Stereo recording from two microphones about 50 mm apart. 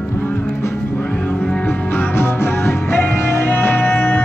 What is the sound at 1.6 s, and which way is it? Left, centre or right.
Music, left.